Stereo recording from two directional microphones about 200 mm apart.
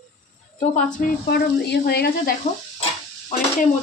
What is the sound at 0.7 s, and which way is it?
A woman's voice, 40° left (ahead or behind).